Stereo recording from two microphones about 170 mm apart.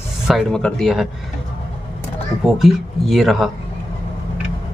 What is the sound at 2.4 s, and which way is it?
Speech, centre (ahead or behind).